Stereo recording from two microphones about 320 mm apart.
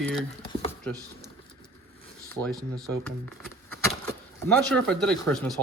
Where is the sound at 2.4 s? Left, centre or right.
Centre.